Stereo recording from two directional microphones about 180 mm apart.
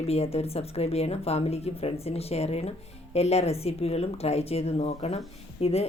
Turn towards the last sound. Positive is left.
turn(degrees=35)  # may be behind; listen again after turning